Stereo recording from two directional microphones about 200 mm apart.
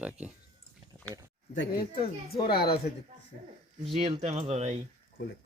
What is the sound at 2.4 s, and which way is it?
Speech, 50° left (ahead or behind).